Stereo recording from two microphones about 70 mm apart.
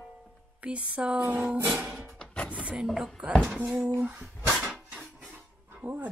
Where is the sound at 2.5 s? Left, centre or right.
Centre.